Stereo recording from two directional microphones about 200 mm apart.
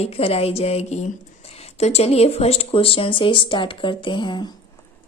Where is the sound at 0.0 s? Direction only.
30° left (ahead or behind).